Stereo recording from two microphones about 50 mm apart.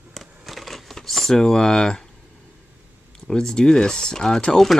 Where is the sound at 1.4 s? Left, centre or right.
Centre.